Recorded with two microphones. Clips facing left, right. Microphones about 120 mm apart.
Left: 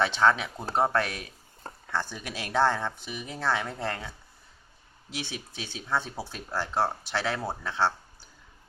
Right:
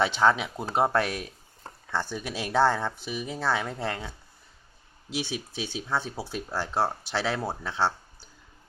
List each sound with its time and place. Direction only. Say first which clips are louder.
0.0 s speech: right 1 dB; 10° right (ahead or behind)
5.1 s speech: right 5 dB; 15° right (ahead or behind)